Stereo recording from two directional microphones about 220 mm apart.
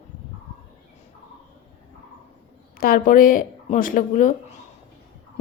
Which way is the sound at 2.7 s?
40° left (ahead or behind).